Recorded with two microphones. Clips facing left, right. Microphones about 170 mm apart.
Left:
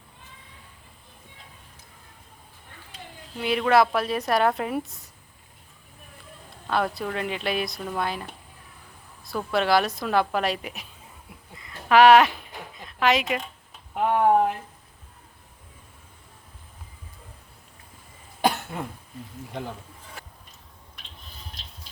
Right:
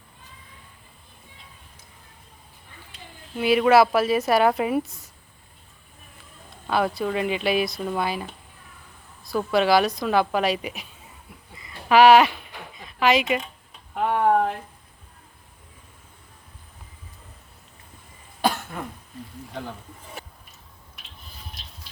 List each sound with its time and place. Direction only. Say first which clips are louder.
3.3 s a woman's voice: right 4 dB; 5° right (ahead or behind)
6.7 s a woman's voice: right 3 dB; 5° right (ahead or behind)
11.5 s a sound: right 1 dB; 5° right (ahead or behind)
12.8 s speech: right 2 dB; 5° right (ahead or behind)
13.9 s speech: even; 15° left (ahead or behind)
18.7 s speech: left 1 dB; 20° left (ahead or behind)